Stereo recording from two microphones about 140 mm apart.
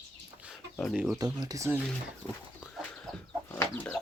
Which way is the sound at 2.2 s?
20° left (ahead or behind).